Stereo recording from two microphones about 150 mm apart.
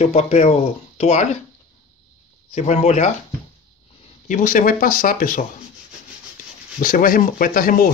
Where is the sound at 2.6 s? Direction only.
50° left (ahead or behind).